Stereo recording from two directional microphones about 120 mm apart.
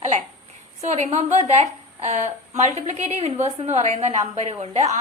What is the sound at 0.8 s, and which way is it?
A woman's voice, 70° right (ahead or behind).